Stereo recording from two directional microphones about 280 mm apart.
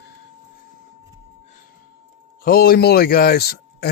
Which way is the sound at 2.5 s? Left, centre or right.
Left.